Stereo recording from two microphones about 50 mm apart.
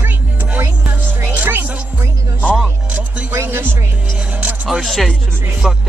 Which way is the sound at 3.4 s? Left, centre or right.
Right.